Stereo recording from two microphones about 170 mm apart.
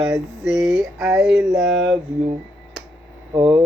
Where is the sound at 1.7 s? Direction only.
90° right.